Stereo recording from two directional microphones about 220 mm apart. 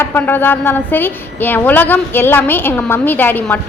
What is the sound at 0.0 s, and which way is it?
A woman's voice, 10° left (ahead or behind).